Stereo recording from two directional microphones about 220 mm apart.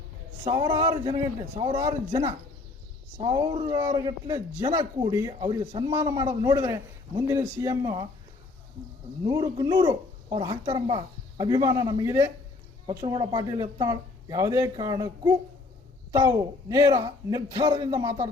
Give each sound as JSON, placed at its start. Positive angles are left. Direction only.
{"t": 0.4, "sound": "a man's voice", "side_deg": -25}
{"t": 9.2, "sound": "a man's voice", "side_deg": -15}